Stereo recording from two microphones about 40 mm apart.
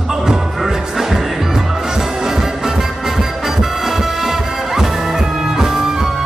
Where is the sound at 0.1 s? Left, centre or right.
Centre.